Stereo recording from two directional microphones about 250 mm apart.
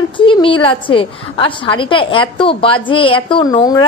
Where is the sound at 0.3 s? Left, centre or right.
Centre.